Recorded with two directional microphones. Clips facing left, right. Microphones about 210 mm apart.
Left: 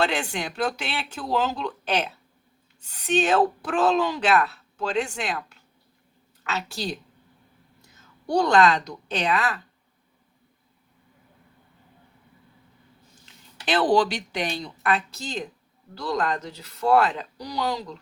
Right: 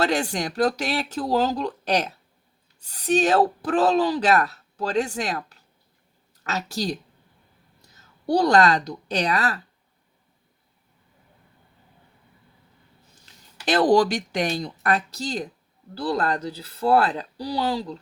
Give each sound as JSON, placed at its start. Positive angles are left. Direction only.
{"t": 0.0, "sound": "speech", "side_deg": -40}
{"t": 8.3, "sound": "speech", "side_deg": -35}
{"t": 13.7, "sound": "speech", "side_deg": -40}